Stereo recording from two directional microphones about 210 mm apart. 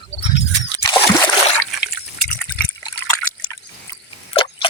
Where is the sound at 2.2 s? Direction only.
5° left (ahead or behind).